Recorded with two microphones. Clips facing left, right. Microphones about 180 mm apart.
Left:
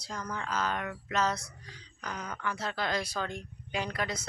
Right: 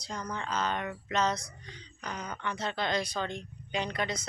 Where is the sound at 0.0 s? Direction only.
5° left (ahead or behind).